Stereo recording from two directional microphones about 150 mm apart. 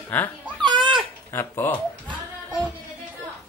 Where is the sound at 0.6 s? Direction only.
30° right (ahead or behind).